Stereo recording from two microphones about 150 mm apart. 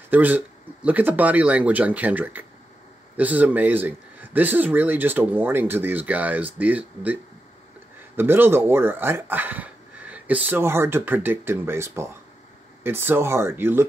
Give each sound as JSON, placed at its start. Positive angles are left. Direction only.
{"t": 0.1, "sound": "speech", "side_deg": -10}
{"t": 8.2, "sound": "speech", "side_deg": -15}